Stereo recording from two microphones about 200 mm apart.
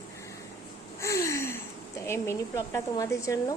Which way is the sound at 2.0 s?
15° left (ahead or behind).